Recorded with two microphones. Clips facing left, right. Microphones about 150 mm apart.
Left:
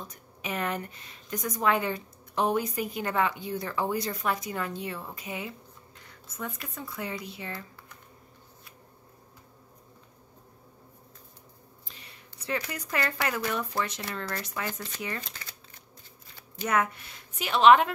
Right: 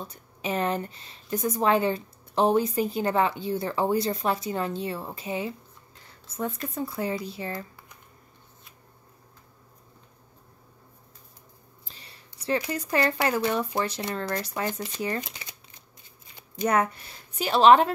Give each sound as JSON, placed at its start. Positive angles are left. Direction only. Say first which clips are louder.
{"t": 0.0, "sound": "speech", "louder": "right 5 dB", "side_deg": -30}
{"t": 6.0, "sound": "a sound", "louder": "right 7 dB", "side_deg": -30}
{"t": 6.7, "sound": "a woman's voice", "louder": "right 7 dB", "side_deg": -35}
{"t": 11.9, "sound": "a sound", "louder": "right 1 dB", "side_deg": -35}
{"t": 12.7, "sound": "a woman's voice", "louder": "right 6 dB", "side_deg": -30}
{"t": 14.7, "sound": "speech", "louder": "right 6 dB", "side_deg": -20}
{"t": 16.6, "sound": "a woman's voice", "louder": "right 3 dB", "side_deg": -35}